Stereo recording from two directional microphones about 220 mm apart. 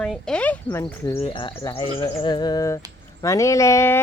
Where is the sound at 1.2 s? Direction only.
20° left (ahead or behind).